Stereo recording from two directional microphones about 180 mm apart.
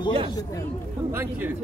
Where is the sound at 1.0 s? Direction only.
15° right (ahead or behind).